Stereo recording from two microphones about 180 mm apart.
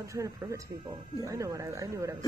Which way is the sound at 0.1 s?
15° right (ahead or behind).